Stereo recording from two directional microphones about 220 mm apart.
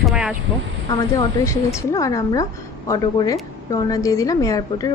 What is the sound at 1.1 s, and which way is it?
A woman's voice, 15° left (ahead or behind).